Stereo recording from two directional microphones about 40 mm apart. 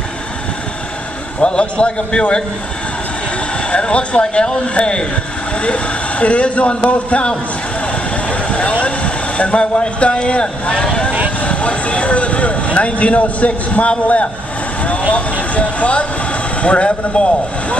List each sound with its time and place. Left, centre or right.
1.4 s speech: left
3.7 s speech: left
7.9 s vehicle: left
8.8 s speech: left
14.8 s vehicle: left
15.1 s speech: left